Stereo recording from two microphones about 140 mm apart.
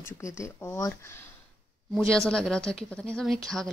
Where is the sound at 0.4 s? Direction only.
20° left (ahead or behind).